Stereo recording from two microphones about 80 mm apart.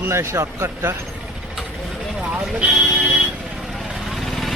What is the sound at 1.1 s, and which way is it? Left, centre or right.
Vehicle, centre.